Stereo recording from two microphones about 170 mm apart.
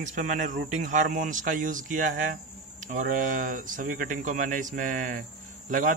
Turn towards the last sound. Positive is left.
turn(degrees=-45)  # may be behind; listen again after turning